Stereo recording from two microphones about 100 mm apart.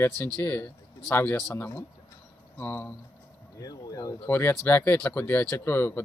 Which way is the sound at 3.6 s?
35° left (ahead or behind).